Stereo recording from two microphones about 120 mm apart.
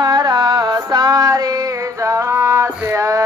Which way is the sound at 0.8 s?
35° right (ahead or behind).